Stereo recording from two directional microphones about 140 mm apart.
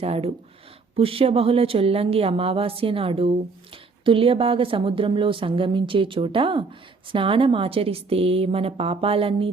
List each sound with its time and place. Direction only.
0.0 s a woman's voice: 45° right (ahead or behind)